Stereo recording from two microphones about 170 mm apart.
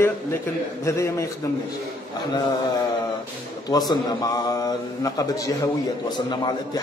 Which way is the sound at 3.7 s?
20° left (ahead or behind).